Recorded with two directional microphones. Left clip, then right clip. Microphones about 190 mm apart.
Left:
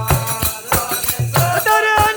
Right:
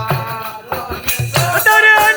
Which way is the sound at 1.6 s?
15° left (ahead or behind).